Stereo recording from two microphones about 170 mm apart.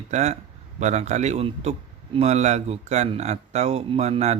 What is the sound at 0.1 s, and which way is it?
Speech, 40° right (ahead or behind).